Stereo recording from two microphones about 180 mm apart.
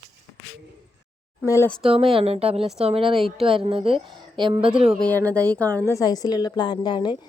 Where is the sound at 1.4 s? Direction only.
15° left (ahead or behind).